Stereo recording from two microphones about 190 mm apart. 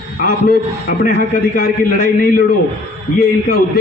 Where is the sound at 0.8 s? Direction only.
50° left (ahead or behind).